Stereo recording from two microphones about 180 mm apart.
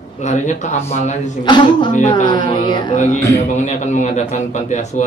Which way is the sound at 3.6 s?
40° left (ahead or behind).